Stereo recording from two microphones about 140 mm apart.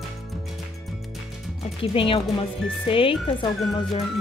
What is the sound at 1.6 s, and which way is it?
A woman's voice, 40° left (ahead or behind).